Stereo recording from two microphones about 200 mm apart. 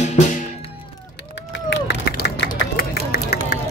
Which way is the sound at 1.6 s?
55° left (ahead or behind).